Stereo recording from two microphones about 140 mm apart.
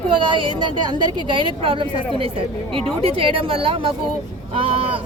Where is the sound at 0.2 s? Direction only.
35° right (ahead or behind).